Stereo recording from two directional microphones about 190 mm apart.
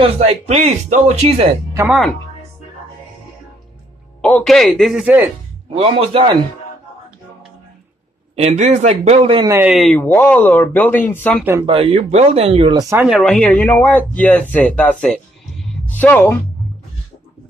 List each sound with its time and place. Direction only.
0.0 s speech: 30° right (ahead or behind)
4.2 s speech: 5° left (ahead or behind)
5.8 s speech: 30° right (ahead or behind)
8.4 s speech: 35° right (ahead or behind)
9.7 s speech: 5° left (ahead or behind)
11.6 s speech: 30° right (ahead or behind)
13.0 s speech: centre (ahead or behind)